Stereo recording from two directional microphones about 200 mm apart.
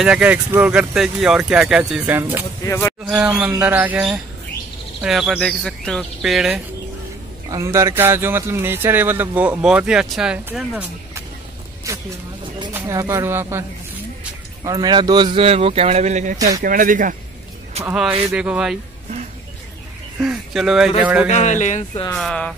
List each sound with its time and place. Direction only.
0.0 s speech: 5° right (ahead or behind)
2.6 s speech: 15° left (ahead or behind)
3.1 s a man's voice: 5° right (ahead or behind)
7.4 s a man's voice: 15° right (ahead or behind)
11.9 s vehicle: 15° right (ahead or behind)
12.7 s a man's voice: 15° right (ahead or behind); by 17.1 s 45° right (ahead or behind)
17.8 s speech: 5° right (ahead or behind)
20.2 s a man's voice: 5° right (ahead or behind)
21.3 s speech: 35° left (ahead or behind)
22.1 s speech: 5° left (ahead or behind)